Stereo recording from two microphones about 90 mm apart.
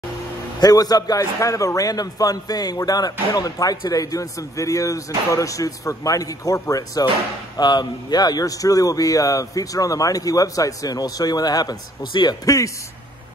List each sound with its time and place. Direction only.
0.6 s a man's voice: 45° left (ahead or behind)
7.5 s a man's voice: 50° left (ahead or behind)
12.4 s a man's voice: 35° left (ahead or behind)